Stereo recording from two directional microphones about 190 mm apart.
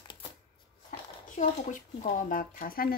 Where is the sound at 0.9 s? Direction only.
40° left (ahead or behind).